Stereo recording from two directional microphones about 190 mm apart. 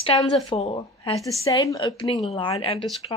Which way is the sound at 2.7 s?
Centre (ahead or behind).